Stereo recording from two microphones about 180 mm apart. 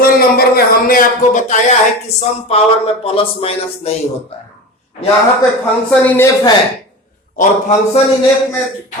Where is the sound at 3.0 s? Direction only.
35° left (ahead or behind).